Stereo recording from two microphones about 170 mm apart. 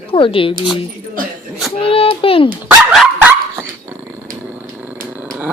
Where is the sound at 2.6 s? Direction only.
Centre (ahead or behind).